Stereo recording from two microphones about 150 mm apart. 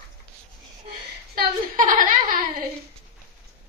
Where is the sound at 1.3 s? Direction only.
70° right (ahead or behind).